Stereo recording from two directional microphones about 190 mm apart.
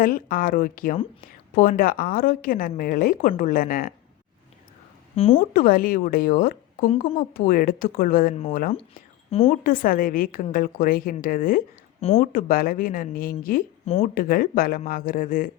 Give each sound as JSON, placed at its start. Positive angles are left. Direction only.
{"t": 0.0, "sound": "a woman's voice", "side_deg": 45}
{"t": 5.1, "sound": "speech", "side_deg": 30}
{"t": 5.5, "sound": "a woman's voice", "side_deg": 50}
{"t": 9.5, "sound": "a woman's voice", "side_deg": 50}
{"t": 11.9, "sound": "speech", "side_deg": 30}
{"t": 12.2, "sound": "a woman's voice", "side_deg": 50}